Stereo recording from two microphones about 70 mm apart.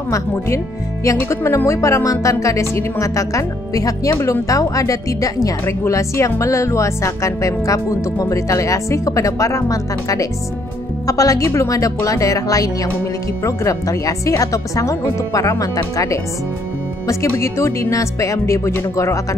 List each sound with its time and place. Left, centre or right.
1.0 s speech: left
5.7 s speech: left